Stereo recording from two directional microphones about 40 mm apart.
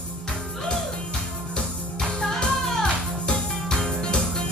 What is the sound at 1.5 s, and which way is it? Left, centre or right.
Music, centre.